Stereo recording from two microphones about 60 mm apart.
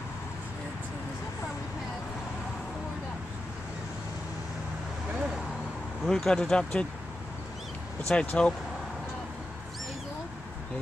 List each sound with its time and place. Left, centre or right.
6.0 s speech: centre
8.1 s speech: centre